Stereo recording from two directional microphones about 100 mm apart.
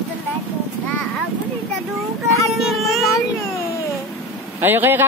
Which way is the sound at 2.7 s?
Centre (ahead or behind).